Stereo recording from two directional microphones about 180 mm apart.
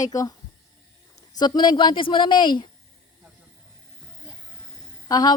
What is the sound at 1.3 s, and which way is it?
A man's voice, 25° left (ahead or behind).